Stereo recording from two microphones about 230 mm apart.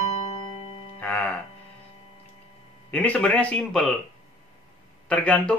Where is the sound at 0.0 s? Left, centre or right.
Left.